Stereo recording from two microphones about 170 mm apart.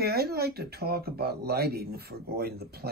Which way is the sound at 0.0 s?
70° right (ahead or behind).